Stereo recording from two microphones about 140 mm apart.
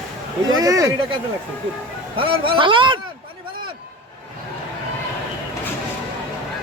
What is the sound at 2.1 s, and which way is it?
Speech, 40° right (ahead or behind).